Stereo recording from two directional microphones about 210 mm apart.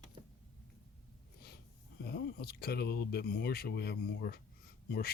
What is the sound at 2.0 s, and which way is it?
Speech, 50° left (ahead or behind).